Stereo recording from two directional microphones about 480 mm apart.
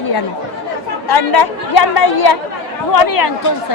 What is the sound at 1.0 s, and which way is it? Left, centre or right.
Speech, left.